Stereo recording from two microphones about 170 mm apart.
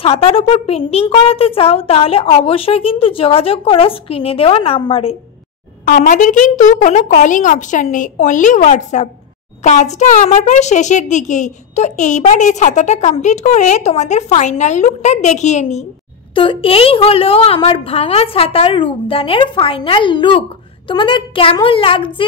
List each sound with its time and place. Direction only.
0.0 s a woman's voice: 35° left (ahead or behind)
5.9 s a child's voice: 45° left (ahead or behind)
16.3 s a woman's voice: 30° left (ahead or behind)